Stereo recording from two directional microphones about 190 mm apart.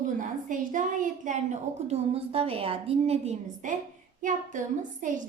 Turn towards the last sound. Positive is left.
turn(degrees=-40)  # may be behind; listen again after turning